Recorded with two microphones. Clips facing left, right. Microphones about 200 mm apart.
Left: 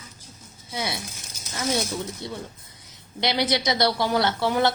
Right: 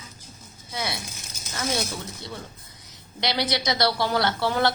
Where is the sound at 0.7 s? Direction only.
20° left (ahead or behind).